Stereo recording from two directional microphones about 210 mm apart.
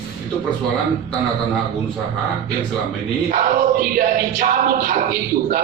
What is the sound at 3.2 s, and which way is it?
Music, 40° right (ahead or behind).